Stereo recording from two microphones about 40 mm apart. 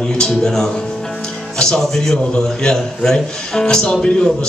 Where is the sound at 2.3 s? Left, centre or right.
Centre.